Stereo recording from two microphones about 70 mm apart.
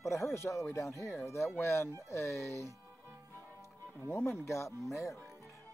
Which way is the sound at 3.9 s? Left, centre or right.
Left.